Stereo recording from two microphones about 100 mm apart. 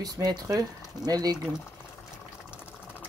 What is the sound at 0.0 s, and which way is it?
Speech, 40° right (ahead or behind).